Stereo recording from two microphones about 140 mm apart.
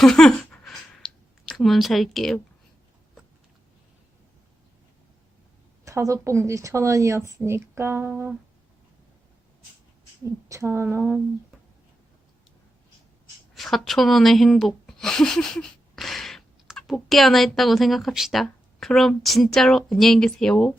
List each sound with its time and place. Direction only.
0.0 s a sound: 5° left (ahead or behind)
5.8 s a woman's voice: 20° right (ahead or behind)
10.2 s speech: 20° right (ahead or behind)
13.5 s speech: centre (ahead or behind)